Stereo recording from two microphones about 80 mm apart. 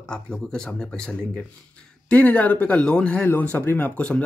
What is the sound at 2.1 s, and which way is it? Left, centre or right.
Speech, centre.